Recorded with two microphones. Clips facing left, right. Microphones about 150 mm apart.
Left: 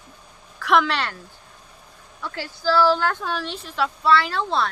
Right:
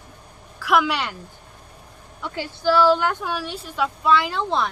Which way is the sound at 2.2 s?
20° right (ahead or behind).